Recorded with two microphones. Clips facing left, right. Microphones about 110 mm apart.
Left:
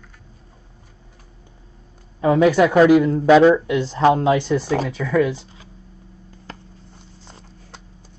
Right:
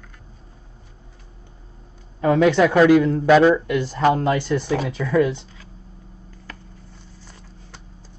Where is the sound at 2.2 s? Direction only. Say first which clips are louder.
Left 1 dB; 5° left (ahead or behind).